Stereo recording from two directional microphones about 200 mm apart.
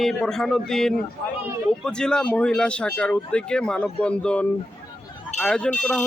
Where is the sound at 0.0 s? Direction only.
Centre (ahead or behind).